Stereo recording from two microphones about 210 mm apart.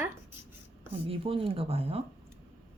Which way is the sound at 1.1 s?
25° right (ahead or behind).